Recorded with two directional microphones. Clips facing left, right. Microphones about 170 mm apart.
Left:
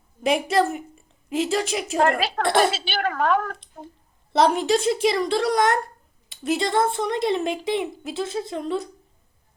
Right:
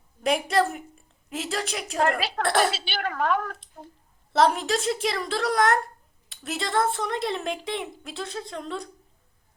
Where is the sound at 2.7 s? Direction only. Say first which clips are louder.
Left 5 dB; 50° left (ahead or behind).